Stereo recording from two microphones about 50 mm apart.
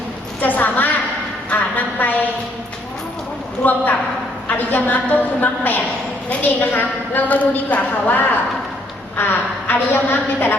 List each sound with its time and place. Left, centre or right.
0.4 s a woman's voice: left
1.5 s a sound: left
3.6 s a woman's voice: left